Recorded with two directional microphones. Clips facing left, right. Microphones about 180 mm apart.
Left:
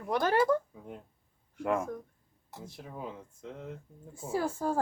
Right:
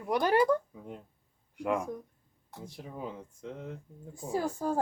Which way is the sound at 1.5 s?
15° right (ahead or behind).